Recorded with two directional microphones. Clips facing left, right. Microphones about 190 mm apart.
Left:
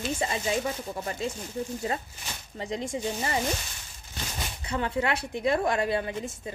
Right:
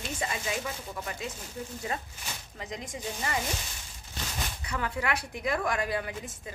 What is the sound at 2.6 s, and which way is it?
Speech, 30° left (ahead or behind).